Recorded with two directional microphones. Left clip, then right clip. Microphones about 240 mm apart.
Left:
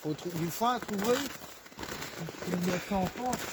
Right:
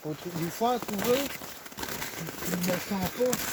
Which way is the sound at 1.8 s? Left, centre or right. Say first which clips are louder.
Right 4 dB; right.